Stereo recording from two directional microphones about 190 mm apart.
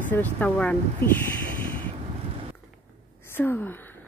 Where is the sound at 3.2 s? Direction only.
10° left (ahead or behind).